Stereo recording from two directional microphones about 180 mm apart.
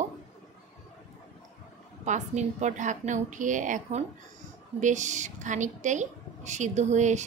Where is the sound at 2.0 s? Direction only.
40° right (ahead or behind).